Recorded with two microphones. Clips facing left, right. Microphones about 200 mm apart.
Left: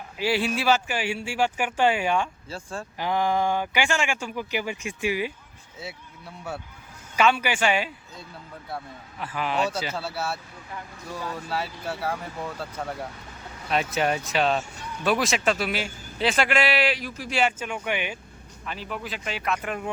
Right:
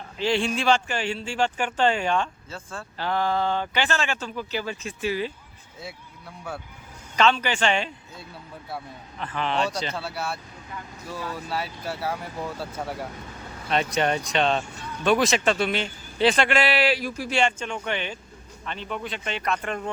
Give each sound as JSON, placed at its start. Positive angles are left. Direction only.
{"t": 0.2, "sound": "speech", "side_deg": 5}
{"t": 7.2, "sound": "speech", "side_deg": 10}
{"t": 9.1, "sound": "a man's voice", "side_deg": 10}
{"t": 13.7, "sound": "a man's voice", "side_deg": 5}
{"t": 16.7, "sound": "a man's voice", "side_deg": -35}
{"t": 17.2, "sound": "a man's voice", "side_deg": 0}